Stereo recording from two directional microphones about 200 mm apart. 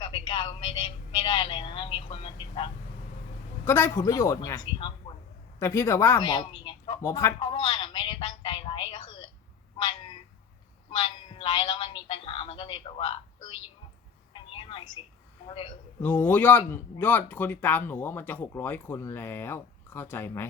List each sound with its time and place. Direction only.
0.0 s a sound: 25° left (ahead or behind)
1.1 s a man's voice: 25° left (ahead or behind)
3.7 s speech: 15° left (ahead or behind)
5.5 s speech: 15° left (ahead or behind)
7.3 s a sound: 25° left (ahead or behind)
10.9 s a man's voice: 25° left (ahead or behind)
14.5 s telephone: 25° left (ahead or behind)
15.4 s a man's voice: 25° left (ahead or behind)
16.0 s speech: 10° left (ahead or behind)